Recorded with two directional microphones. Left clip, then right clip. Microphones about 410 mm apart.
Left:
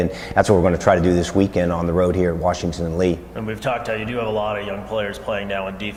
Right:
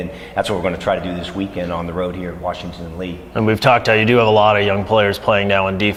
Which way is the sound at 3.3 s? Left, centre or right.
Right.